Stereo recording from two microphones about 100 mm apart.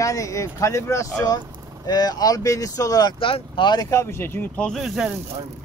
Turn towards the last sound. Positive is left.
turn(degrees=-5)  # may be behind; listen again after turning